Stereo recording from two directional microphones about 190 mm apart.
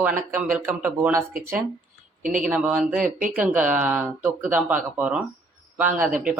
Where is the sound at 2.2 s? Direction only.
5° right (ahead or behind).